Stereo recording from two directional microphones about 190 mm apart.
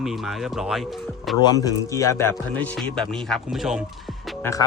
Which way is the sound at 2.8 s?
Centre (ahead or behind).